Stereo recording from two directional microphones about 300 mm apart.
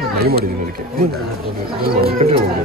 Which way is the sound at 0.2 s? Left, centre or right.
Right.